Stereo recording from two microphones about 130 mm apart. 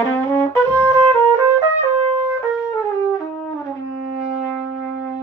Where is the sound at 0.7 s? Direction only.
10° right (ahead or behind).